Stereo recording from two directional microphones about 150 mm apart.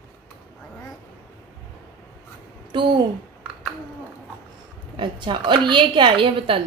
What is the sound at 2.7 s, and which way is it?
Speech, 30° right (ahead or behind).